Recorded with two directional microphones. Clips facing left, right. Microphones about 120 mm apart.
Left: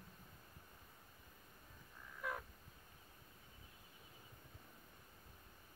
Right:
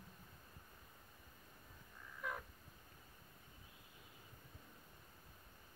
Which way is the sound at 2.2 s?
Centre (ahead or behind).